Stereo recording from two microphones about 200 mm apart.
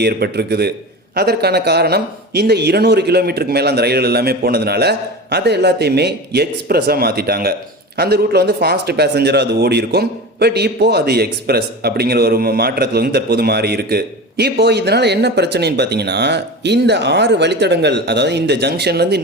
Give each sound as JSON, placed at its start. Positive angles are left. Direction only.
{"t": 0.0, "sound": "a man's voice", "side_deg": -55}